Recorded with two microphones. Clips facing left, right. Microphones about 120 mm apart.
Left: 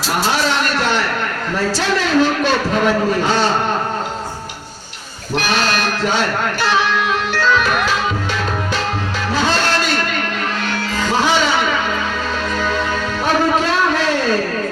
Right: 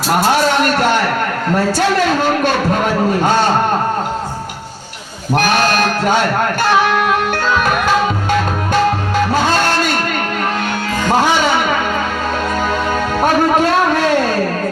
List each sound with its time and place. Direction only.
0.2 s a sound: 50° right (ahead or behind)
1.7 s speech: 50° right (ahead or behind)
5.3 s speech: 50° right (ahead or behind)
6.6 s music: 50° right (ahead or behind)
11.0 s music: 50° right (ahead or behind)
13.2 s a sound: 50° right (ahead or behind)